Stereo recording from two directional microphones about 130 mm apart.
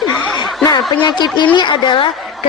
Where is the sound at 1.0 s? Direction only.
35° left (ahead or behind).